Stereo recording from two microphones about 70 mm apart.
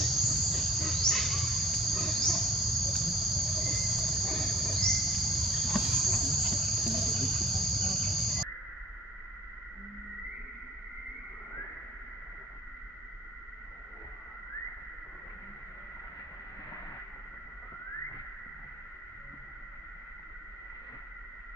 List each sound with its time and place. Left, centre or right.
0.0 s cricket: centre